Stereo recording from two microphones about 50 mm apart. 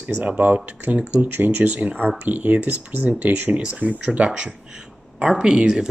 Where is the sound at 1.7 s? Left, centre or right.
Right.